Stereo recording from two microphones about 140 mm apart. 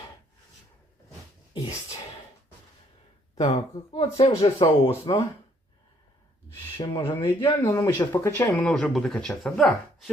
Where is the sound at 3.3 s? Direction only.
50° left (ahead or behind).